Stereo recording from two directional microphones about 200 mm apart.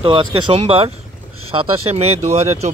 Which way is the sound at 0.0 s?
25° right (ahead or behind).